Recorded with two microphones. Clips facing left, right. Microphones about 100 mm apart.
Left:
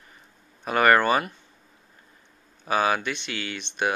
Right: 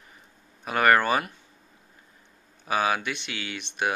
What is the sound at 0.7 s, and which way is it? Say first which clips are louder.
Speech: left 2 dB; centre (ahead or behind).